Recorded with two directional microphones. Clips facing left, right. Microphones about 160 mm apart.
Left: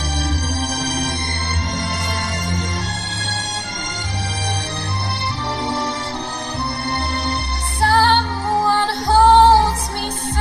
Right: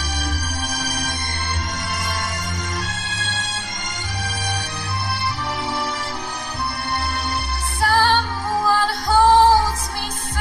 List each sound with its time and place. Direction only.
0.2 s music: 30° left (ahead or behind)
7.8 s music: 30° left (ahead or behind)